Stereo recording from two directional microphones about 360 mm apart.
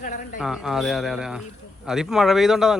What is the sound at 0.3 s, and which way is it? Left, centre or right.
A man's voice, centre.